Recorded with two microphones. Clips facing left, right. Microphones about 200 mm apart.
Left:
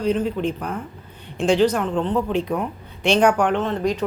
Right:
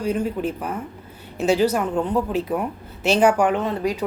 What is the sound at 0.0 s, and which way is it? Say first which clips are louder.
A woman's voice: left 2 dB; 10° right (ahead or behind).